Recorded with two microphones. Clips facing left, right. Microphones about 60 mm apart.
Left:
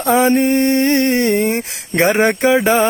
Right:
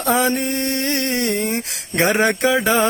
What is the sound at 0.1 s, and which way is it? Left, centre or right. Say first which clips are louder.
Mantra: left 6 dB; left.